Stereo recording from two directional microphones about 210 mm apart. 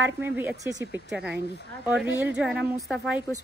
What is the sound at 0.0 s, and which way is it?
A woman's voice, 10° right (ahead or behind).